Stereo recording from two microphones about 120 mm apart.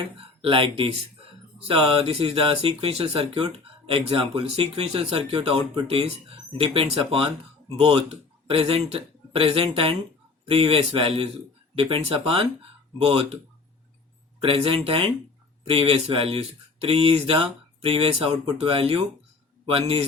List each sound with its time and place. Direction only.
0.2 s speech: 50° right (ahead or behind)
14.4 s speech: 50° right (ahead or behind)